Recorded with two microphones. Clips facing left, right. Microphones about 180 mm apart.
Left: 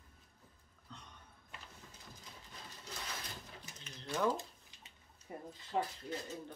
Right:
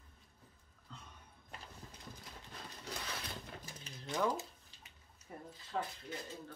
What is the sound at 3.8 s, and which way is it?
Mechanisms, 20° right (ahead or behind).